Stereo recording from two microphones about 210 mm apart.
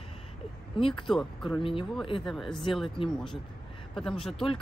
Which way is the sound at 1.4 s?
25° left (ahead or behind).